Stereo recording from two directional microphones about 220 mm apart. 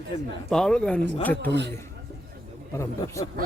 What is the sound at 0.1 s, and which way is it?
Speech, 25° left (ahead or behind).